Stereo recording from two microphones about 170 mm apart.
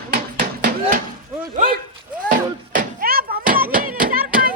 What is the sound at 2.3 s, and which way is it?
Music, 50° right (ahead or behind).